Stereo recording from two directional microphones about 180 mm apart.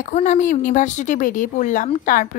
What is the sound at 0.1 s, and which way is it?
A woman's voice, 45° left (ahead or behind).